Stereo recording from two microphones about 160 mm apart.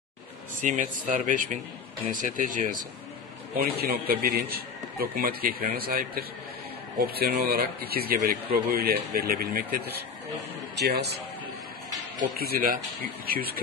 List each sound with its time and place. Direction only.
0.6 s speech: 55° right (ahead or behind)
3.8 s a man's voice: 75° right (ahead or behind)
10.8 s speech: 90° right
12.2 s a man's voice: 70° right (ahead or behind)